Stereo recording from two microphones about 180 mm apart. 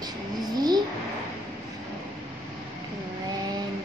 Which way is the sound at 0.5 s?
20° right (ahead or behind).